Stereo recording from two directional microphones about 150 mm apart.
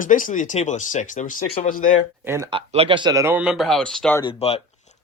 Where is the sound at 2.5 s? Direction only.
35° right (ahead or behind).